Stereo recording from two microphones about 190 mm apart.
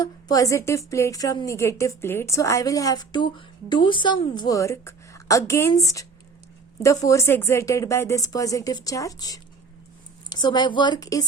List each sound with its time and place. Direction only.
0.0 s a woman's voice: 20° left (ahead or behind)